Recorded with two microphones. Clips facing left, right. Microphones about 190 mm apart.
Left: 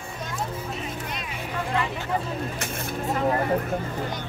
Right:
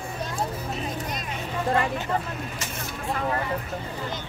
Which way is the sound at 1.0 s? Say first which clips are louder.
Right 1 dB; 45° right (ahead or behind).